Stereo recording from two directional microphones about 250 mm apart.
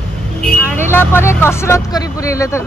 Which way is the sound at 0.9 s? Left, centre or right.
Centre.